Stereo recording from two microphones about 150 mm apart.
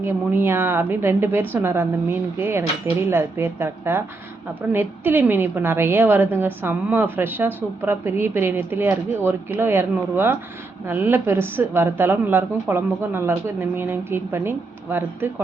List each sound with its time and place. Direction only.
0.0 s a woman's voice: 15° right (ahead or behind)